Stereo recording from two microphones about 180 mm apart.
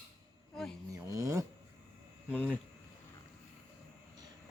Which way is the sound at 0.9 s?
15° right (ahead or behind).